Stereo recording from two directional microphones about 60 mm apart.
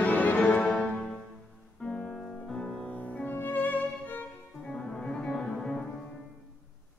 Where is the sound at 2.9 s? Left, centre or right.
Left.